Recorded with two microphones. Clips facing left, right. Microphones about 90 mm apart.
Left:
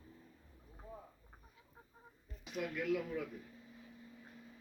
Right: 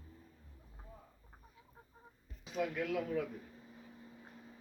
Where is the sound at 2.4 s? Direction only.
30° right (ahead or behind).